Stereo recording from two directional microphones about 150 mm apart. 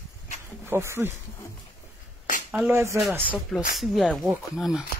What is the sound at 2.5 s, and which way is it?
Speech, 10° right (ahead or behind).